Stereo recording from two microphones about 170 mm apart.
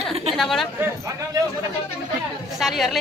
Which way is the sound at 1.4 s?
20° right (ahead or behind).